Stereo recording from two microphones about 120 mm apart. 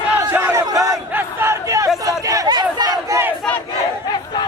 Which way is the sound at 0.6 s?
30° right (ahead or behind).